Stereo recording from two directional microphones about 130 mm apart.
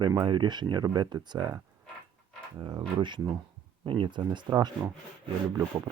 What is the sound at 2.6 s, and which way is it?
Speech, 35° right (ahead or behind).